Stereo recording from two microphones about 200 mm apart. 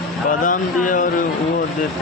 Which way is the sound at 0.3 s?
40° left (ahead or behind).